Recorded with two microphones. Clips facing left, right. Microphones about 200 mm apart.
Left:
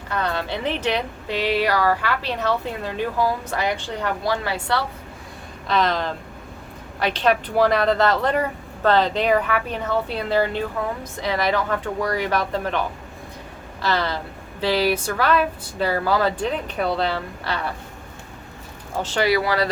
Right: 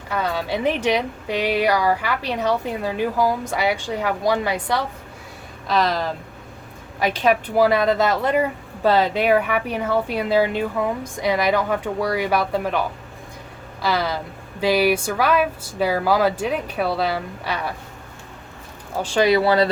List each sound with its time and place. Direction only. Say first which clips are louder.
0.1 s a woman's voice: right 2 dB; 10° right (ahead or behind)
5.6 s a woman's voice: right 1 dB; centre (ahead or behind)
13.8 s a woman's voice: right 1 dB; 10° right (ahead or behind)
19.0 s speech: right 4 dB; 15° right (ahead or behind)